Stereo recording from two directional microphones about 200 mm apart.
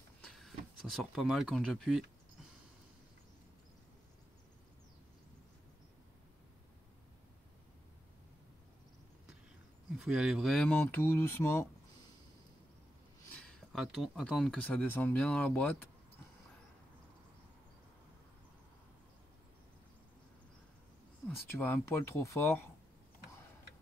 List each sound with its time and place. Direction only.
0.2 s speech: centre (ahead or behind)
9.9 s speech: centre (ahead or behind); by 11.6 s 15° left (ahead or behind)
13.4 s speech: centre (ahead or behind)
21.5 s speech: 10° left (ahead or behind)